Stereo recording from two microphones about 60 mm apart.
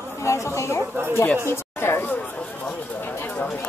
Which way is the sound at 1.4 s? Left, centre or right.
Left.